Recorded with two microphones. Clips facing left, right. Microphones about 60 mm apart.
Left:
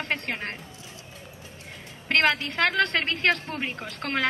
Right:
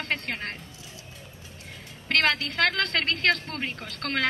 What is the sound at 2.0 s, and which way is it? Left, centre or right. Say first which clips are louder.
A woman's voice: left 2 dB; centre.